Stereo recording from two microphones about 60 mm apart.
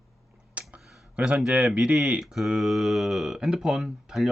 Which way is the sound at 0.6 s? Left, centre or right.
Right.